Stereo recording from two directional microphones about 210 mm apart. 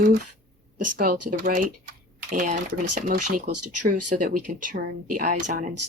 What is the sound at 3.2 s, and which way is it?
Speech, 90° right.